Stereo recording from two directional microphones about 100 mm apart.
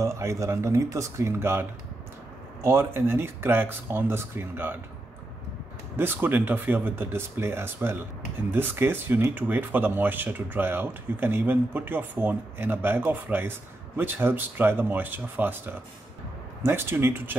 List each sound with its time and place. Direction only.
0.0 s speech: 30° right (ahead or behind)
5.9 s speech: 20° right (ahead or behind)